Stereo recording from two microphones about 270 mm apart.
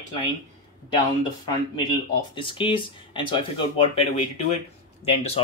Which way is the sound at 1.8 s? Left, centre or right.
Centre.